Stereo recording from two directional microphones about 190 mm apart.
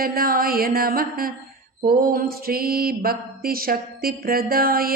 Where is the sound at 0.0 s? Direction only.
50° right (ahead or behind).